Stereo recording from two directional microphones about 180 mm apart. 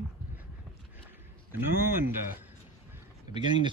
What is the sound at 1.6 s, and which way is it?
Speech, 10° right (ahead or behind).